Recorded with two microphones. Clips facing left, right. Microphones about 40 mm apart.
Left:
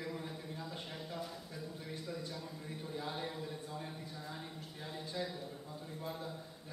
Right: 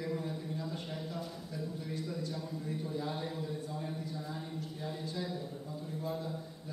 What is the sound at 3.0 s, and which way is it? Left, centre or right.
Speech, centre.